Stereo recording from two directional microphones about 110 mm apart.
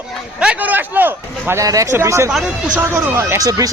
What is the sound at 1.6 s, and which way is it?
Speech, 30° right (ahead or behind).